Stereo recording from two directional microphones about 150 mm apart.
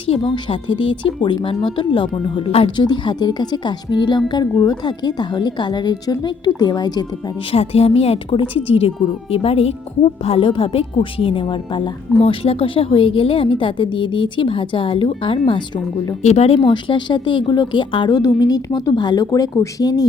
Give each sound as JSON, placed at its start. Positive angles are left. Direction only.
{"t": 0.2, "sound": "a woman's voice", "side_deg": 35}
{"t": 7.5, "sound": "a woman's voice", "side_deg": 40}
{"t": 16.2, "sound": "speech", "side_deg": 45}
{"t": 16.6, "sound": "a woman's voice", "side_deg": 30}